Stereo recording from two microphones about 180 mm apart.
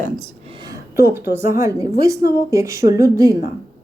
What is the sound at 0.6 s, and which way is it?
A woman's voice, 15° right (ahead or behind).